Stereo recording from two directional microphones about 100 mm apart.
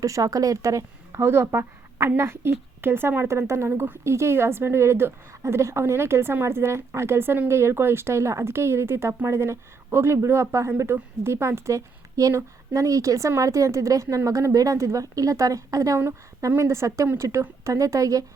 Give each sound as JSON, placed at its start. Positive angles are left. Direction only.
{"t": 0.0, "sound": "a woman's voice", "side_deg": -35}
{"t": 16.0, "sound": "a woman's voice", "side_deg": -25}